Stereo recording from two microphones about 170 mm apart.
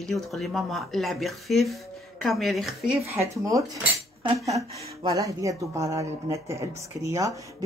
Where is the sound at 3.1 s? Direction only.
20° right (ahead or behind).